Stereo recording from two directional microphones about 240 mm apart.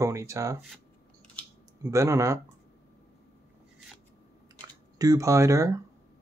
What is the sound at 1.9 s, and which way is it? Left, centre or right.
Speech, centre.